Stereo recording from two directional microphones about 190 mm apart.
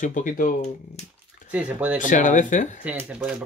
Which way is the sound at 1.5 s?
5° right (ahead or behind).